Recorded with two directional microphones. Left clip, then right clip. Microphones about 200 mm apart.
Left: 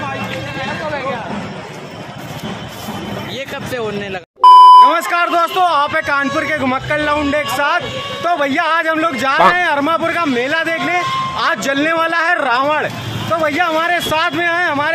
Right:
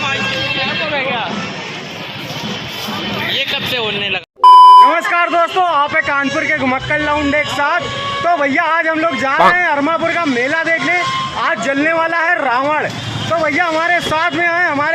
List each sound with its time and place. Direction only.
3.5 s speech: 40° left (ahead or behind)
4.4 s a man's voice: centre (ahead or behind)